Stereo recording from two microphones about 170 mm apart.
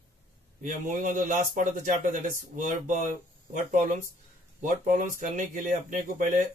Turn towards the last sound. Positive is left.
turn(degrees=-50)  # may be behind; listen again after turning